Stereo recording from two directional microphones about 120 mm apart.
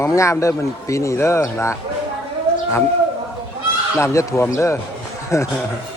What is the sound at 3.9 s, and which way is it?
Speech, 25° left (ahead or behind).